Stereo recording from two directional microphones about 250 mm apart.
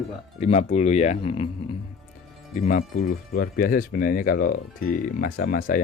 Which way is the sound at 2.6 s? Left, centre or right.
Left.